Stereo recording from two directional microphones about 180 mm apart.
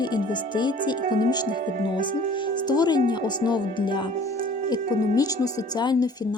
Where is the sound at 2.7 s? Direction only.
25° left (ahead or behind).